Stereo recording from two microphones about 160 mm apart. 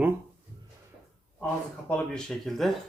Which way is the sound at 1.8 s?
5° left (ahead or behind).